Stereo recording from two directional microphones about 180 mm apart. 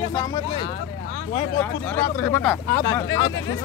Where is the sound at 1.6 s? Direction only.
15° left (ahead or behind).